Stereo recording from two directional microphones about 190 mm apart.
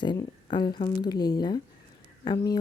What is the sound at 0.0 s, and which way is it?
A woman's voice, 25° left (ahead or behind).